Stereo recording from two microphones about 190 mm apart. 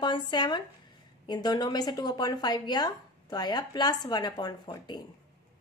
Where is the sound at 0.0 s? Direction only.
25° left (ahead or behind).